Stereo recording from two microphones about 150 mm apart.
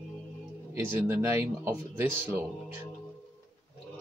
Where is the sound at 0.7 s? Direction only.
15° right (ahead or behind).